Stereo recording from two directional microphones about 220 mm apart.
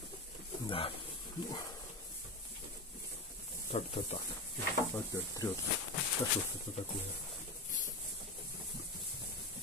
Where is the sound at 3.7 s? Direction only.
30° left (ahead or behind).